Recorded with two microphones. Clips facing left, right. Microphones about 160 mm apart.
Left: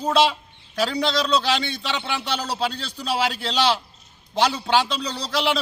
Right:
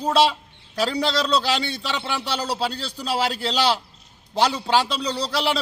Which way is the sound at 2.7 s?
35° right (ahead or behind).